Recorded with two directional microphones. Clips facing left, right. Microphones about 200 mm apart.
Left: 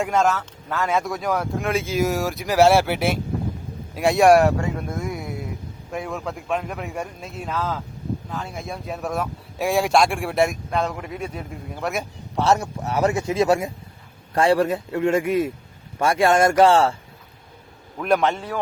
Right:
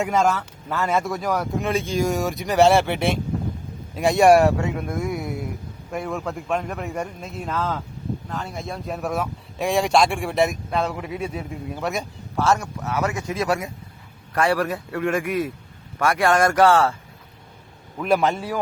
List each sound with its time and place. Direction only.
0.0 s speech: centre (ahead or behind)
12.4 s a man's voice: 25° left (ahead or behind)
17.9 s speech: centre (ahead or behind)